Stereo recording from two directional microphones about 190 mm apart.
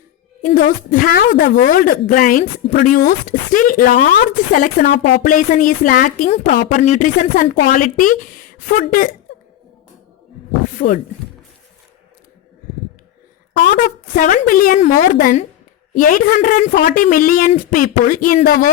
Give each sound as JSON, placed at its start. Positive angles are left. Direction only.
{"t": 0.4, "sound": "speech", "side_deg": 45}
{"t": 1.5, "sound": "speech", "side_deg": 45}
{"t": 10.8, "sound": "speech", "side_deg": 40}
{"t": 13.7, "sound": "speech", "side_deg": 45}